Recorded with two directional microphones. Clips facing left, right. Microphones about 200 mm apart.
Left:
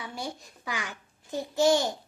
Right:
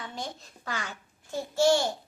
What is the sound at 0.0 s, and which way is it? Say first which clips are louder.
A child's voice: left 1 dB; 10° left (ahead or behind).